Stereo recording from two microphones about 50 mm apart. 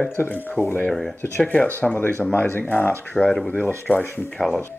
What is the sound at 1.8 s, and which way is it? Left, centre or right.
Speech, left.